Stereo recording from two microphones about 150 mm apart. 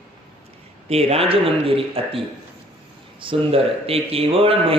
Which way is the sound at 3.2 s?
35° right (ahead or behind).